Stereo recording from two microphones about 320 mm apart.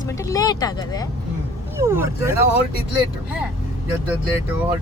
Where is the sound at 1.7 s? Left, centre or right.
Centre.